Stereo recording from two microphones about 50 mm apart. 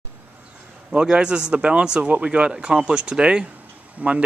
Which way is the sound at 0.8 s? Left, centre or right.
Centre.